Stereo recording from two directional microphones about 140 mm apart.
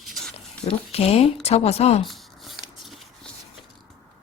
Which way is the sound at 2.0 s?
Centre (ahead or behind).